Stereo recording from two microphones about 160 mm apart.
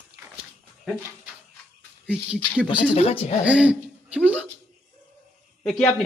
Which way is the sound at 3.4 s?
10° right (ahead or behind).